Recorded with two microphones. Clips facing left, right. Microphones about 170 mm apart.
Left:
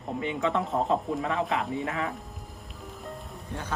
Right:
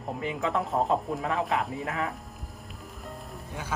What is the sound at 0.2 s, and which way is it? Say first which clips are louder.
Speech: left 2 dB; centre (ahead or behind).